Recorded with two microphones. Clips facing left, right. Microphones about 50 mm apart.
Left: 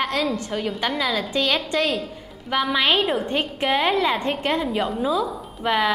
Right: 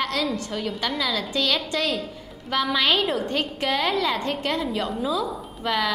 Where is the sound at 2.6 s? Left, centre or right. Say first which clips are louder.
Left 2 dB; centre.